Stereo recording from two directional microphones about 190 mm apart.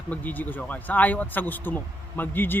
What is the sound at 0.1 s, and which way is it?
Speech, 10° left (ahead or behind).